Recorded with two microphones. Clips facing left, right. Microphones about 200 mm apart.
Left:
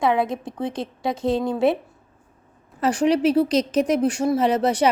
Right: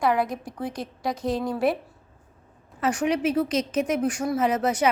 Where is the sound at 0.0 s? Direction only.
25° left (ahead or behind).